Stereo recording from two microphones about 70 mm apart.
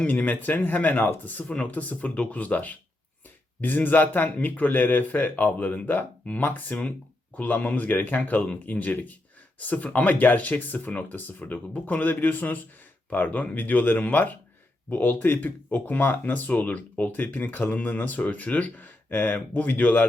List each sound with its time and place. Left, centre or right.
0.1 s speech: left